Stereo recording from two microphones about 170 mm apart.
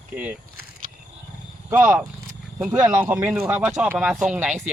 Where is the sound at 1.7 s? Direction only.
15° right (ahead or behind).